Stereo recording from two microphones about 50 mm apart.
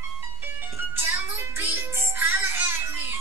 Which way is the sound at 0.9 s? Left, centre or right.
Right.